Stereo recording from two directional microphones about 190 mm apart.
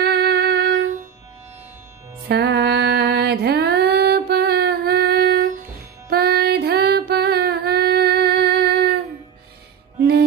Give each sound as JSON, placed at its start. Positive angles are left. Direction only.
{"t": 0.0, "sound": "music", "side_deg": -55}
{"t": 2.2, "sound": "music", "side_deg": -60}
{"t": 9.9, "sound": "music", "side_deg": -60}